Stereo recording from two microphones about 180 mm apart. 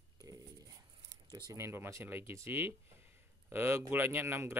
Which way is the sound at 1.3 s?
20° right (ahead or behind).